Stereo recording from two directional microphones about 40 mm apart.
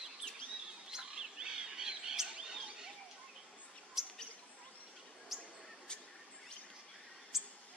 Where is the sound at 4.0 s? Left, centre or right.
Centre.